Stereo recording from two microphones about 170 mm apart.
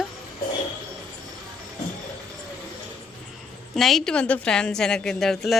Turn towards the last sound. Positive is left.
turn(degrees=0)  # may be behind; listen again after turning